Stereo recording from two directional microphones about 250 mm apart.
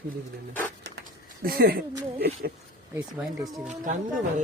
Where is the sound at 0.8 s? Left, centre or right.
Right.